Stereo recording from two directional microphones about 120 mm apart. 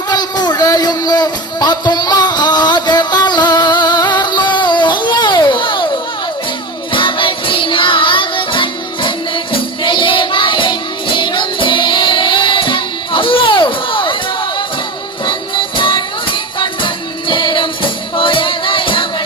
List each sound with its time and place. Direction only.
0.1 s music: 35° left (ahead or behind)
6.9 s music: 45° left (ahead or behind)
15.2 s music: 40° left (ahead or behind)